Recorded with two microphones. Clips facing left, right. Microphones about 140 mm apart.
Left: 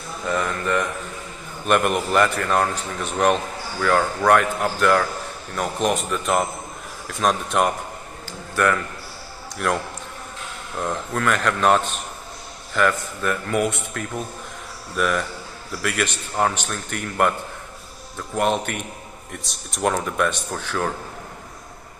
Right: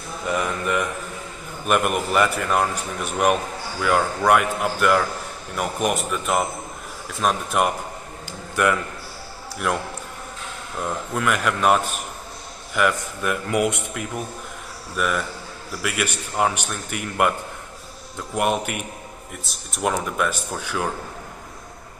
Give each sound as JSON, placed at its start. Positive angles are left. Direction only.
{"t": 0.3, "sound": "a man's voice", "side_deg": -10}
{"t": 8.3, "sound": "a sound", "side_deg": -15}
{"t": 9.6, "sound": "speech", "side_deg": -5}
{"t": 10.8, "sound": "a man's voice", "side_deg": -10}
{"t": 15.0, "sound": "a man's voice", "side_deg": 0}
{"t": 18.3, "sound": "a man's voice", "side_deg": -10}